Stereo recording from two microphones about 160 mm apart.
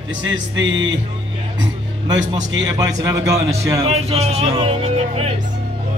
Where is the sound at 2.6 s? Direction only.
20° right (ahead or behind).